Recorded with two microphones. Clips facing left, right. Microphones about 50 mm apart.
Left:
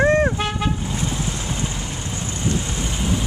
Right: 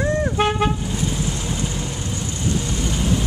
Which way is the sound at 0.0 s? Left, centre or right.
Left.